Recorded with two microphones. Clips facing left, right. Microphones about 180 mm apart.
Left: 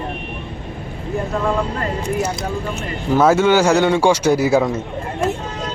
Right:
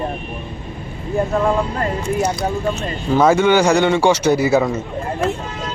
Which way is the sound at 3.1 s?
5° left (ahead or behind).